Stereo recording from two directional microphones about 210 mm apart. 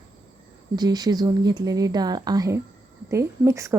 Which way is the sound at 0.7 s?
20° right (ahead or behind).